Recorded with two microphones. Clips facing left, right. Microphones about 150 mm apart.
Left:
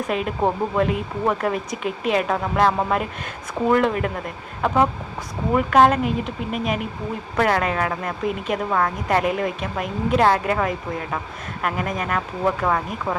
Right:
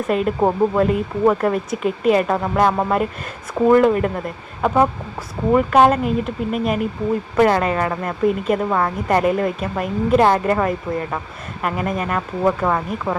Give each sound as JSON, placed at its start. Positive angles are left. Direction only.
{"t": 0.1, "sound": "speech", "side_deg": 0}